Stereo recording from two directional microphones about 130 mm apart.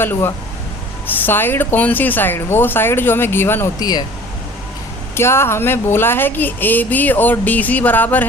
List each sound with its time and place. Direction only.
0.0 s speech: 15° left (ahead or behind)
3.8 s speech: 30° left (ahead or behind)
5.1 s speech: 20° left (ahead or behind)